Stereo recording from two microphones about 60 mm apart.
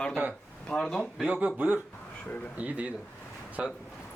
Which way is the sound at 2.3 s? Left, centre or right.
Left.